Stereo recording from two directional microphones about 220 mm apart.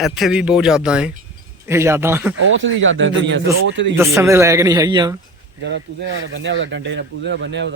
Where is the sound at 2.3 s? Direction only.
65° right (ahead or behind).